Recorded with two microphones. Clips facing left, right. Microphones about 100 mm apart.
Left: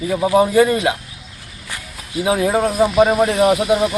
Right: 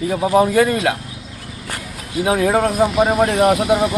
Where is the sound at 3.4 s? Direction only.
Centre (ahead or behind).